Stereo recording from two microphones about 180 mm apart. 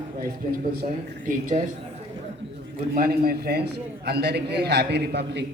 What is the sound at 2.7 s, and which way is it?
A man's voice, 55° right (ahead or behind).